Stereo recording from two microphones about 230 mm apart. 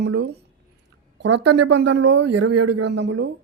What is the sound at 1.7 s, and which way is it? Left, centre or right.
Speech, right.